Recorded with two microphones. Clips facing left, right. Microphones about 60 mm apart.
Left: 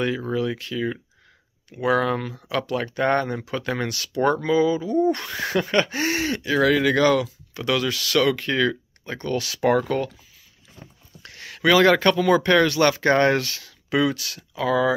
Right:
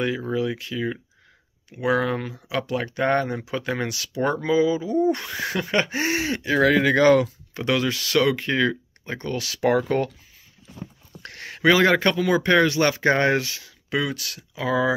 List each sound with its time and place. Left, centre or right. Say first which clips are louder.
0.0 s speech: even; centre
5.8 s speech: right 1 dB; centre
9.3 s speech: left 1 dB; centre
11.2 s a sound: right 3 dB; right
11.5 s speech: left 1 dB; right
13.8 s speech: left 4 dB; centre
14.5 s speech: left 2 dB; centre